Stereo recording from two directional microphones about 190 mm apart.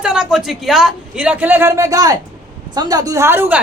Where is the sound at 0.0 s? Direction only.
5° right (ahead or behind).